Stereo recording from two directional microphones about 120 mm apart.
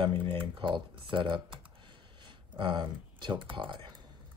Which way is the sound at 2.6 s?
40° right (ahead or behind).